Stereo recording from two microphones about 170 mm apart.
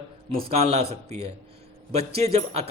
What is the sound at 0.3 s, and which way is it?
A man's voice, 35° right (ahead or behind).